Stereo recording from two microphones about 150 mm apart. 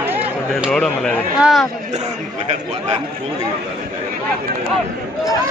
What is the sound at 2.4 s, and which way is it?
Speech, 45° right (ahead or behind).